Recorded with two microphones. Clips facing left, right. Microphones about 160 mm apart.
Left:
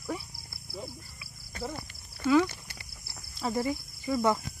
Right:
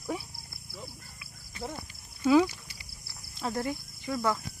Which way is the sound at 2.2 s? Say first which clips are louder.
Right 1 dB; 15° right (ahead or behind).